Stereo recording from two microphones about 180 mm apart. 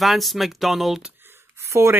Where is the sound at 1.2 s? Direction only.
15° right (ahead or behind).